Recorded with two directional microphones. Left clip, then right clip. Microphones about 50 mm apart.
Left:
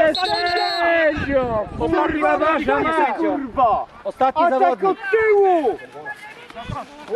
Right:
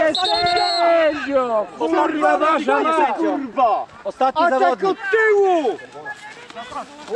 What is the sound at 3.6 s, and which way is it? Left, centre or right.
Speech, right.